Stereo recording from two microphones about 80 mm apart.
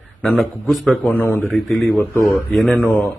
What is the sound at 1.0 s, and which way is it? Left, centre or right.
Speech, left.